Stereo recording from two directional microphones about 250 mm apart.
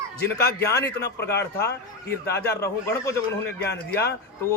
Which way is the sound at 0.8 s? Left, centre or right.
Left.